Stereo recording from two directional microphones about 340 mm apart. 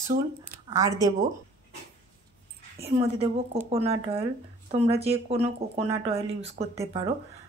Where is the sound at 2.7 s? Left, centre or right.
Centre.